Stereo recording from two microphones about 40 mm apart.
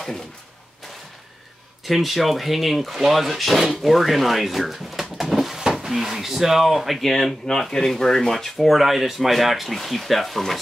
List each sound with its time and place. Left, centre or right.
1.9 s speech: centre
5.6 s a sound: centre
5.9 s speech: centre